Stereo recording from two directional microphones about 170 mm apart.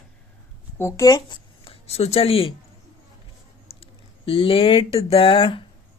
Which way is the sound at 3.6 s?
35° left (ahead or behind).